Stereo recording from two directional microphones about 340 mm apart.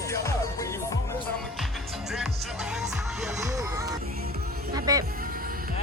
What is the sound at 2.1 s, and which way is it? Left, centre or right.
Music, centre.